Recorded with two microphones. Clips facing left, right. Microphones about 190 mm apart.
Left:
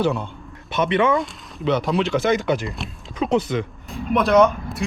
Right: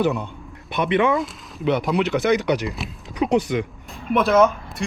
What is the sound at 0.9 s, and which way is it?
Speech, 15° right (ahead or behind).